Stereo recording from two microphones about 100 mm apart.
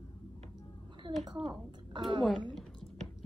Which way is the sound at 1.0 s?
60° right (ahead or behind).